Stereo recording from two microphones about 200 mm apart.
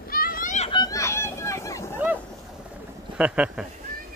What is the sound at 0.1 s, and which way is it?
Children playing, 45° left (ahead or behind).